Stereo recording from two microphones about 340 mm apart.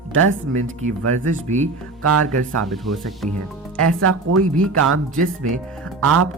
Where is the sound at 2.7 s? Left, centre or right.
Centre.